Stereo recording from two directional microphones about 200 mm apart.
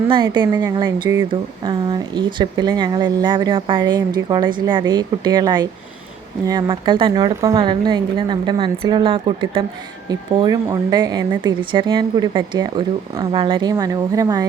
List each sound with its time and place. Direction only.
0.1 s speech: 20° right (ahead or behind)